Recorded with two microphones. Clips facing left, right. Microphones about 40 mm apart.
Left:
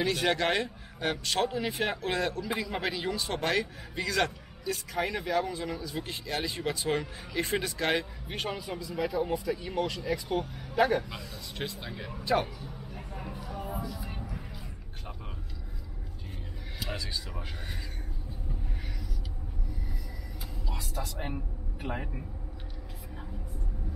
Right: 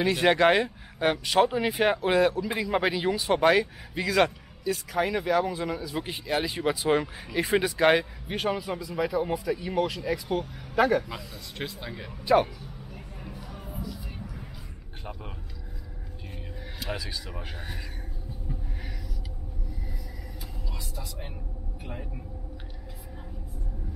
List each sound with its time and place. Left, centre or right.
0.0 s speech: centre
7.9 s speech: centre
13.7 s a sound: centre
13.9 s music: centre
16.8 s speech: centre
20.7 s speech: left